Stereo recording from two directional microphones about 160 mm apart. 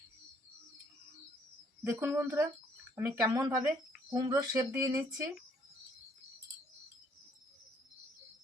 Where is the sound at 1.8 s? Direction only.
15° right (ahead or behind).